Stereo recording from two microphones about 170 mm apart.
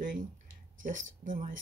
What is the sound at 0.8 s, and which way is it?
Speech, 50° right (ahead or behind).